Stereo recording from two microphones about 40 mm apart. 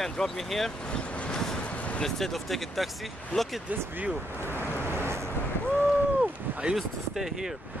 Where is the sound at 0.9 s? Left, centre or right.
Left.